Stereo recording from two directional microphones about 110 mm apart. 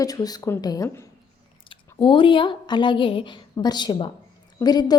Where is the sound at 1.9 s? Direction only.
50° left (ahead or behind).